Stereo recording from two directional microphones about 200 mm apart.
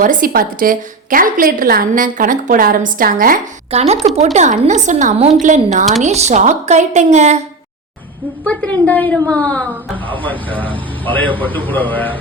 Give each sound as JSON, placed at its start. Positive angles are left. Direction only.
{"t": 0.0, "sound": "a woman's voice", "side_deg": -45}
{"t": 3.7, "sound": "a woman's voice", "side_deg": -30}
{"t": 8.4, "sound": "a woman's voice", "side_deg": 5}